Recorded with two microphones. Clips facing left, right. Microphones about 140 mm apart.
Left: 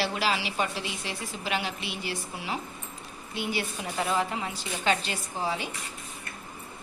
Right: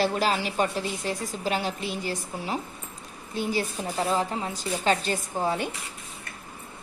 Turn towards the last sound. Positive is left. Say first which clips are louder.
# right 4 dB
turn(degrees=-50)  # may be behind; listen again after turning